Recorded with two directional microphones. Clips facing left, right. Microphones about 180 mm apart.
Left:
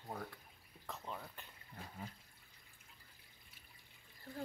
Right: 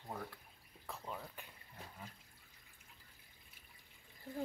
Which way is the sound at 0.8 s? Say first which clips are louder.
Right 1 dB; 5° right (ahead or behind).